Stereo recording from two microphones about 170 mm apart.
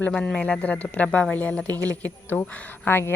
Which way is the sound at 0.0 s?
5° left (ahead or behind).